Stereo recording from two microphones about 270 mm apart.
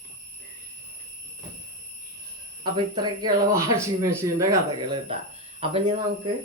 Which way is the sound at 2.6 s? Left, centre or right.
Centre.